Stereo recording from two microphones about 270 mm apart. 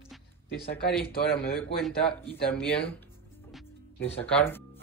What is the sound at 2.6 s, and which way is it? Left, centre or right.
Speech, centre.